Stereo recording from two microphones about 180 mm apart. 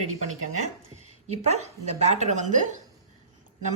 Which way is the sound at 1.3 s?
40° right (ahead or behind).